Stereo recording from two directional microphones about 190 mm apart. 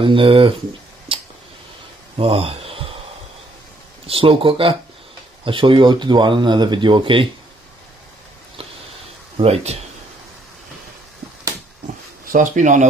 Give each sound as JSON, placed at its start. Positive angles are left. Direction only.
{"t": 0.0, "sound": "speech", "side_deg": -30}
{"t": 2.1, "sound": "a sound", "side_deg": -30}
{"t": 4.1, "sound": "speech", "side_deg": -30}
{"t": 9.4, "sound": "speech", "side_deg": -35}
{"t": 12.3, "sound": "speech", "side_deg": -40}